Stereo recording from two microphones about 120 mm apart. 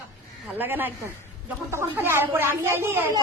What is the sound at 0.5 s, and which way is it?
A woman's voice, 15° right (ahead or behind).